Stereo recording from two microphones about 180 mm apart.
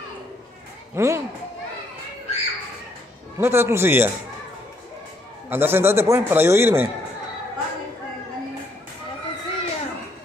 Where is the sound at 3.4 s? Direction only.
15° right (ahead or behind).